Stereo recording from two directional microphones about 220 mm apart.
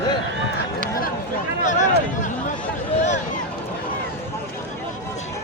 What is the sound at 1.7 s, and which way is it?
Speech, 35° left (ahead or behind).